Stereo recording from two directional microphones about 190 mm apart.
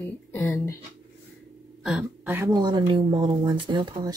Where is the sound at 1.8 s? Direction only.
5° right (ahead or behind).